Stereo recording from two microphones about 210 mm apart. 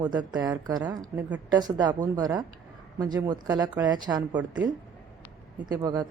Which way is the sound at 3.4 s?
20° right (ahead or behind).